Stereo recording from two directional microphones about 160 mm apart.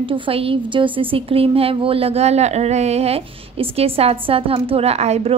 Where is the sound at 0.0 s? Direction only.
35° right (ahead or behind).